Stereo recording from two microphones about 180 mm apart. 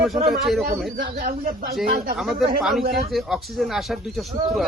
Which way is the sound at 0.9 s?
55° right (ahead or behind).